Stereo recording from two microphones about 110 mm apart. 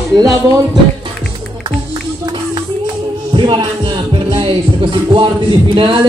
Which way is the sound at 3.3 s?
50° right (ahead or behind).